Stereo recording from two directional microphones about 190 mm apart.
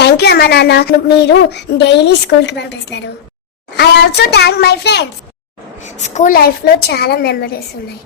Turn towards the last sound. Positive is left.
turn(degrees=55)  # may be behind; listen again after turning